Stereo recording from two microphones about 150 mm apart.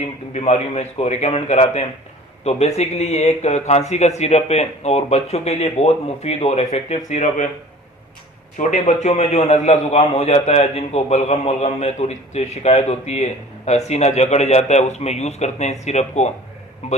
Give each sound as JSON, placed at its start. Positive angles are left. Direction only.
{"t": 0.0, "sound": "a man's voice", "side_deg": 50}
{"t": 8.5, "sound": "a man's voice", "side_deg": 55}